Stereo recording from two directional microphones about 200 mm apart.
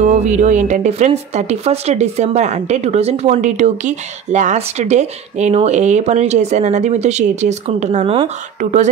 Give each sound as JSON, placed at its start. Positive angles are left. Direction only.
{"t": 0.0, "sound": "speech", "side_deg": -35}